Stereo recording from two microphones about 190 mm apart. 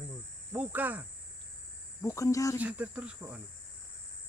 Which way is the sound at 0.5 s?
10° right (ahead or behind).